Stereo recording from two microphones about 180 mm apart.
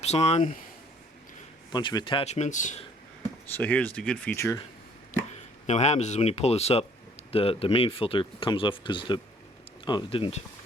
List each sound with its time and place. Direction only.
0.0 s speech: 35° left (ahead or behind)
1.7 s speech: 25° left (ahead or behind); by 2.8 s 45° left (ahead or behind)
3.6 s speech: 10° left (ahead or behind)
5.3 s speech: 40° left (ahead or behind)